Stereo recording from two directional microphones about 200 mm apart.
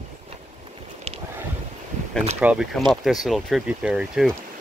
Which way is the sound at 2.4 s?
5° right (ahead or behind).